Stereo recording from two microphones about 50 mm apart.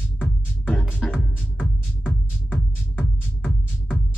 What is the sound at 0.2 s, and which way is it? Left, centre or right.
Music, left.